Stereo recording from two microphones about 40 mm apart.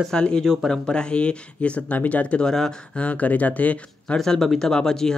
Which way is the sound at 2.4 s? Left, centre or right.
Centre.